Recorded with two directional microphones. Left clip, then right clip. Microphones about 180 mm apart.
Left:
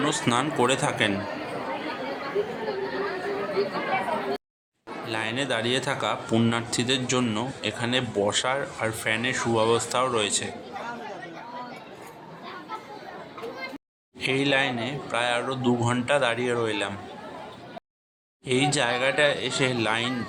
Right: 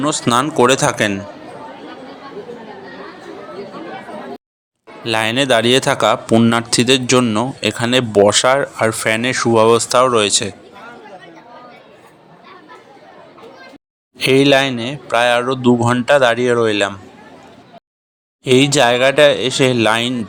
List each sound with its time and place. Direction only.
0.0 s speech: 35° right (ahead or behind)
5.0 s speech: 45° right (ahead or behind)
14.2 s speech: 45° right (ahead or behind)
18.4 s speech: 45° right (ahead or behind)